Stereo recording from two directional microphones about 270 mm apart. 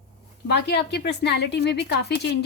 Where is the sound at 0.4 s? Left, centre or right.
Left.